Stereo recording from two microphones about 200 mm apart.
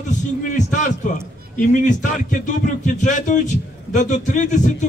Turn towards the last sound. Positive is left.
turn(degrees=40)  # may be behind; listen again after turning